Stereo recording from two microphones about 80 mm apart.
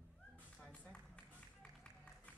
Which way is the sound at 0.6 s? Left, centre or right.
Centre.